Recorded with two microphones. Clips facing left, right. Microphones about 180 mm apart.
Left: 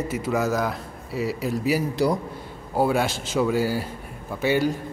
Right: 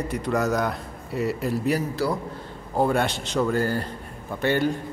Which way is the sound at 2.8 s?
5° left (ahead or behind).